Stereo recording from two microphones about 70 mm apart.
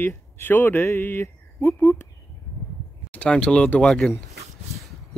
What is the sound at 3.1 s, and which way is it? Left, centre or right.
Speech, centre.